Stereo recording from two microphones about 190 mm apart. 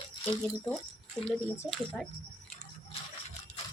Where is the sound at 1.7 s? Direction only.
5° left (ahead or behind).